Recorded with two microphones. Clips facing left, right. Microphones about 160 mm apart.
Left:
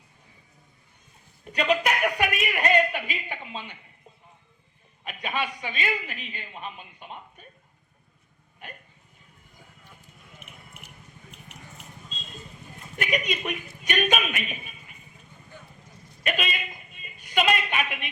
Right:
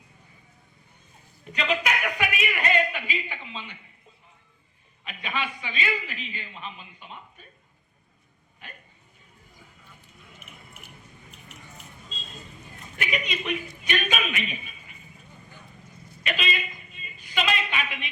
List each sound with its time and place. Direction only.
1.5 s a sound: 45° left (ahead or behind)
5.0 s a man's voice: 45° left (ahead or behind)
13.0 s a man's voice: 45° left (ahead or behind)
16.2 s a woman's voice: 50° left (ahead or behind)